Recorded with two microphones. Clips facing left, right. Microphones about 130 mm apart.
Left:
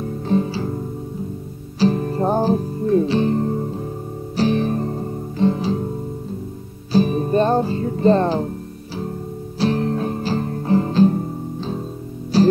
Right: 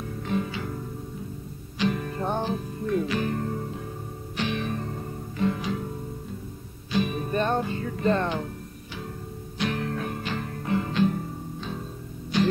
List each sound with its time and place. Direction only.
0.0 s music: 30° left (ahead or behind)
1.8 s music: 35° left (ahead or behind)
6.9 s music: 35° left (ahead or behind)
9.6 s music: 30° left (ahead or behind)